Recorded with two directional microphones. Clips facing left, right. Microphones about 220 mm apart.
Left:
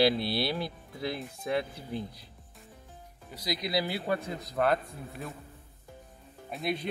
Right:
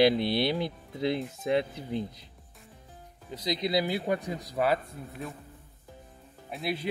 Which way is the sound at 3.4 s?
20° right (ahead or behind).